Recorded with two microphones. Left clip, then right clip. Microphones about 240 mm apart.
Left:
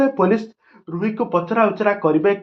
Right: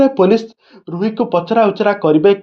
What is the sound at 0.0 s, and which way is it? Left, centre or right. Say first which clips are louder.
Speech: right 6 dB; right.